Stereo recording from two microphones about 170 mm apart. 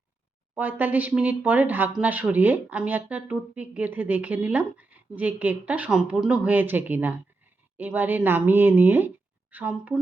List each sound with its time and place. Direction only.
0.5 s speech: 10° right (ahead or behind)